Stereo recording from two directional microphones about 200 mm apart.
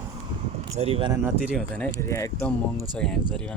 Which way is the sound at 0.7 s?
30° right (ahead or behind).